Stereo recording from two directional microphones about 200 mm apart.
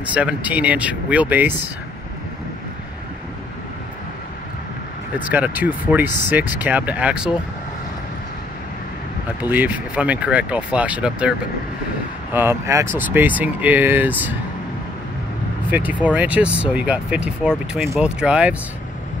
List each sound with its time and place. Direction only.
0.1 s speech: 5° right (ahead or behind)
5.2 s speech: 10° right (ahead or behind)
9.4 s speech: 10° right (ahead or behind)
15.7 s speech: 10° right (ahead or behind)